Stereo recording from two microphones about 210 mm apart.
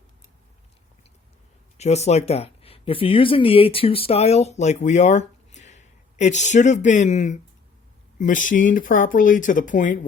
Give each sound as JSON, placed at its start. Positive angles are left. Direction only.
{"t": 1.8, "sound": "speech", "side_deg": 30}